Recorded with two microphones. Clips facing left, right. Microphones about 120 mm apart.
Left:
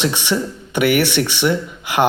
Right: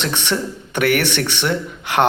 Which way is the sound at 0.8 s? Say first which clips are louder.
Left 2 dB; 55° right (ahead or behind).